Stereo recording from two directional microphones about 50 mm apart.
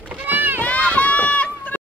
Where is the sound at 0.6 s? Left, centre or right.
Left.